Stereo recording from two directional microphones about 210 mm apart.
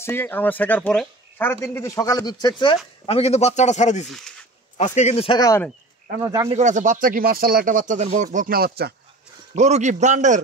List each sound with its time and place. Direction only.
0.0 s a man's voice: 10° left (ahead or behind); by 4.1 s 35° left (ahead or behind)
4.1 s a sound: centre (ahead or behind)
4.7 s speech: 35° left (ahead or behind); by 5.7 s 15° left (ahead or behind)
6.2 s speech: 15° right (ahead or behind)
6.5 s speech: 35° right (ahead or behind)
9.6 s speech: 35° right (ahead or behind)